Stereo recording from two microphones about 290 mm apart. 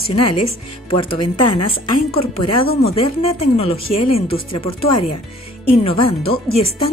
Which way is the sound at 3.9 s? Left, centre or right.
Left.